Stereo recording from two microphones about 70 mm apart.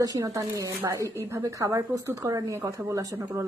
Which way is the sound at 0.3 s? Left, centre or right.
Right.